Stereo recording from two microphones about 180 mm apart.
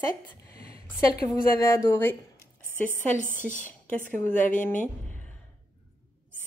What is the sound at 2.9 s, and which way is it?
A woman's voice, 45° left (ahead or behind).